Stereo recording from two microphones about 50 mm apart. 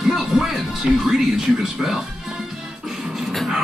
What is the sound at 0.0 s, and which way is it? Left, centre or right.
Music, centre.